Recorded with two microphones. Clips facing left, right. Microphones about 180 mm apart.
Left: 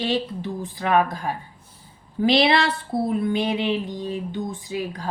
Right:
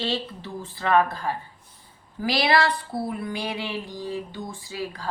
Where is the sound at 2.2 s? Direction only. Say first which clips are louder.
Left 4 dB; 25° left (ahead or behind).